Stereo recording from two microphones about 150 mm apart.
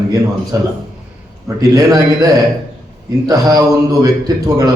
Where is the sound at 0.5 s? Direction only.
20° right (ahead or behind).